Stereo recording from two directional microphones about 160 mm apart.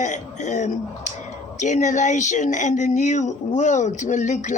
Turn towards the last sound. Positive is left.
turn(degrees=50)  # may be behind; listen again after turning